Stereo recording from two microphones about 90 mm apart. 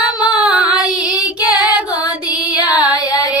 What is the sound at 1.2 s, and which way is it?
Female singing, 15° right (ahead or behind).